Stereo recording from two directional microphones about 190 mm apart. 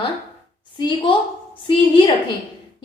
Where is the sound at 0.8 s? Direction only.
25° left (ahead or behind).